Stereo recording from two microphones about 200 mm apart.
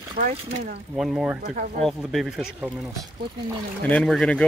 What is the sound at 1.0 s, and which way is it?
Speech, centre (ahead or behind).